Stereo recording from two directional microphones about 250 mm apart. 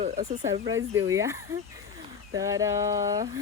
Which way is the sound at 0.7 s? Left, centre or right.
Centre.